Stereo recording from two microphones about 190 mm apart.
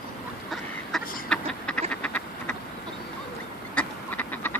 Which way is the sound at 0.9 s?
5° left (ahead or behind).